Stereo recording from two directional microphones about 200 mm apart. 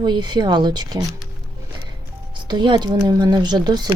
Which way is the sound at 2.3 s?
20° right (ahead or behind).